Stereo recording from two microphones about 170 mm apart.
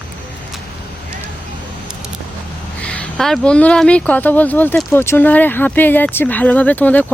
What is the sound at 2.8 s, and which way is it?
Speech, 5° left (ahead or behind).